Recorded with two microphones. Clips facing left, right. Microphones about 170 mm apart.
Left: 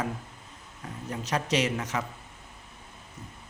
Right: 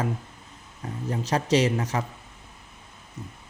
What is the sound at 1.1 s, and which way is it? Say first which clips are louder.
Speech: right 5 dB; 30° right (ahead or behind).